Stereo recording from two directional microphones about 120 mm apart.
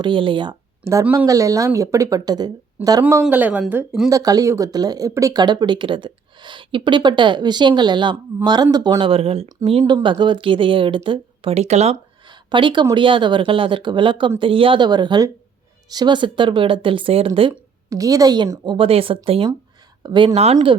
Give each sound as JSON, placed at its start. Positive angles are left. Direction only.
{"t": 0.0, "sound": "speech", "side_deg": -45}
{"t": 1.3, "sound": "a woman's voice", "side_deg": -30}
{"t": 3.0, "sound": "speech", "side_deg": -15}
{"t": 4.1, "sound": "speech", "side_deg": -30}
{"t": 11.5, "sound": "speech", "side_deg": -65}
{"t": 12.5, "sound": "speech", "side_deg": -40}
{"t": 17.8, "sound": "a woman's voice", "side_deg": -30}
{"t": 18.6, "sound": "speech", "side_deg": -45}
{"t": 20.0, "sound": "speech", "side_deg": -40}
{"t": 20.3, "sound": "speech", "side_deg": -60}